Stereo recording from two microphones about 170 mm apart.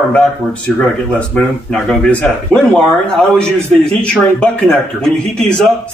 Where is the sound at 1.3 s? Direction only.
5° left (ahead or behind).